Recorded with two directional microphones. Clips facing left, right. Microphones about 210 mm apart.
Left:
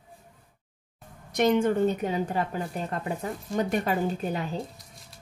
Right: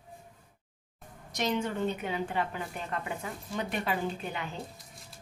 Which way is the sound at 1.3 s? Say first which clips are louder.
Left 9 dB; 55° left (ahead or behind).